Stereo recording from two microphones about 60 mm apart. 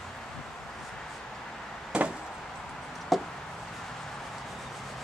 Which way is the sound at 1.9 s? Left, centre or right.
Centre.